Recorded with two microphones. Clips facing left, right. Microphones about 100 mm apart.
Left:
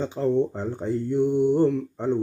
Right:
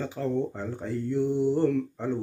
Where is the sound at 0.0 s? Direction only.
25° left (ahead or behind).